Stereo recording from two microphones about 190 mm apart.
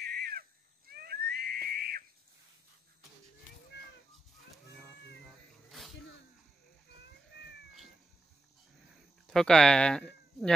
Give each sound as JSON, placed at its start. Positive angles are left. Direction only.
{"t": 0.0, "sound": "a sound", "side_deg": -55}
{"t": 5.2, "sound": "cat", "side_deg": 0}
{"t": 9.2, "sound": "speech", "side_deg": 5}